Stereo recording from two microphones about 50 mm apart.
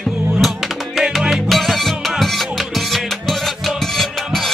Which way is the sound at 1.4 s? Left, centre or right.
Centre.